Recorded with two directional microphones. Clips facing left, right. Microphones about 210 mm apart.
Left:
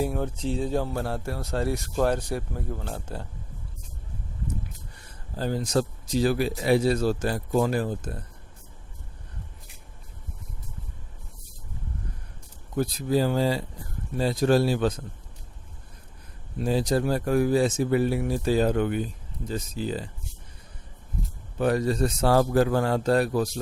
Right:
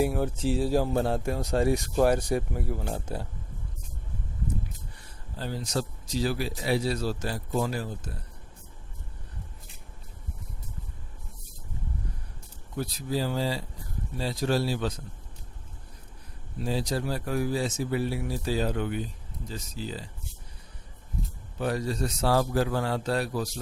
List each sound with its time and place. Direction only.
0.0 s speech: 5° right (ahead or behind)
0.9 s speech: 20° right (ahead or behind)
5.4 s speech: 50° left (ahead or behind)
12.7 s speech: 50° left (ahead or behind)
16.6 s speech: 50° left (ahead or behind)
21.6 s speech: 55° left (ahead or behind)